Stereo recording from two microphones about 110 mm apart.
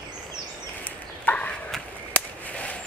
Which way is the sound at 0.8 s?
15° left (ahead or behind).